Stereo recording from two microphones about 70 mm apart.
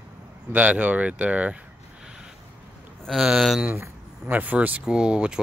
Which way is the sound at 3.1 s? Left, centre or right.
Centre.